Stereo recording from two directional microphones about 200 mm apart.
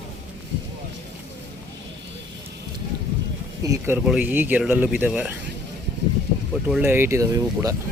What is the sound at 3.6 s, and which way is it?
Speech, 15° right (ahead or behind).